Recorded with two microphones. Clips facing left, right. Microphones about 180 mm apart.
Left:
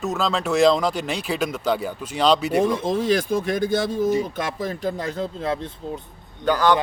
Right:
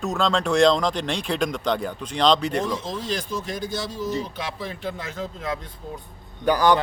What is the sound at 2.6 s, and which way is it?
Speech, 55° left (ahead or behind).